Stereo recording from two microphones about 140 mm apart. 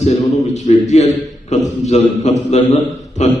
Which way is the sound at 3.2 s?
50° left (ahead or behind).